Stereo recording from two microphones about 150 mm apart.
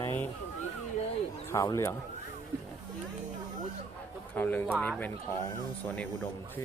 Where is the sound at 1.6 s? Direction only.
20° left (ahead or behind).